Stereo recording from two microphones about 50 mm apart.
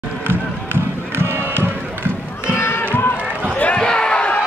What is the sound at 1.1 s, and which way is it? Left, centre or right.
Music, right.